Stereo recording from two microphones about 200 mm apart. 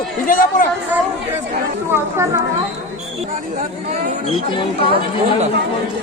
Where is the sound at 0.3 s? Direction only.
45° left (ahead or behind).